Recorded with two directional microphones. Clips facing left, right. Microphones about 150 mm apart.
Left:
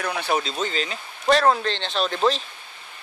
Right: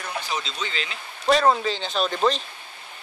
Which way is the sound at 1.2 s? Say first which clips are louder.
Even; centre (ahead or behind).